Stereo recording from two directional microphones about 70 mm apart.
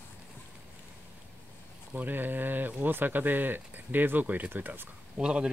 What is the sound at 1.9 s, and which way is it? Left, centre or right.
Speech, right.